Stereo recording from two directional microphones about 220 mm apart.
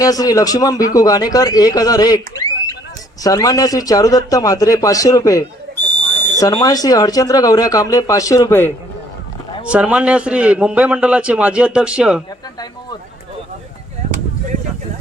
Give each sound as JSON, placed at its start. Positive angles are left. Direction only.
{"t": 0.0, "sound": "speech", "side_deg": 15}
{"t": 9.6, "sound": "a man's voice", "side_deg": -5}